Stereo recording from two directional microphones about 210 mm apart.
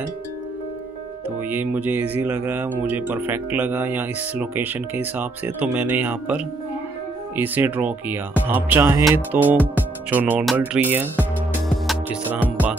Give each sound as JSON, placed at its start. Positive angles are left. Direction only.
{"t": 1.5, "sound": "speech", "side_deg": -10}
{"t": 11.9, "sound": "music", "side_deg": -5}